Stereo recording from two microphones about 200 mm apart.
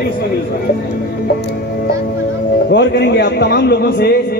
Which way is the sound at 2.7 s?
55° left (ahead or behind).